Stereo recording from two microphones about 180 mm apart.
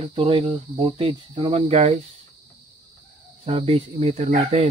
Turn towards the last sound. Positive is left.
turn(degrees=-45)  # may be behind; listen again after turning